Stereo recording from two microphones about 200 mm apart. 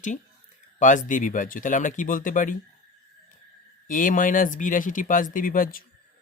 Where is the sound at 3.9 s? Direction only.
40° left (ahead or behind).